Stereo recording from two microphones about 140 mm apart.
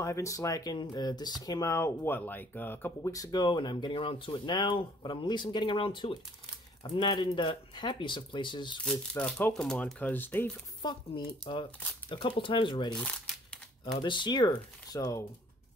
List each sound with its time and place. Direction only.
0.0 s speech: 20° left (ahead or behind)
8.8 s speech: 10° left (ahead or behind)
10.8 s speech: 35° left (ahead or behind)
12.9 s crumpling: 5° left (ahead or behind)
13.9 s speech: 35° left (ahead or behind)